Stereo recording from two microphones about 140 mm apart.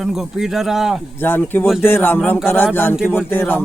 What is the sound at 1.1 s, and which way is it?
Speech, 15° left (ahead or behind).